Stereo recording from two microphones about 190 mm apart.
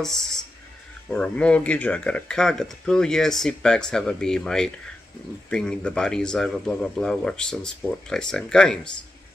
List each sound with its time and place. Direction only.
0.0 s speech: centre (ahead or behind)